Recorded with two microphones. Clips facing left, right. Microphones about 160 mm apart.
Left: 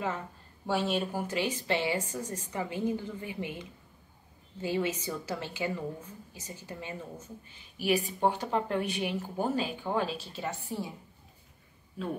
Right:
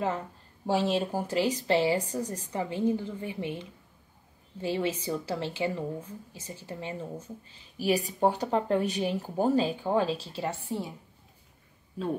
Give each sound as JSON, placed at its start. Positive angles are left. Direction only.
{"t": 0.7, "sound": "a woman's voice", "side_deg": -35}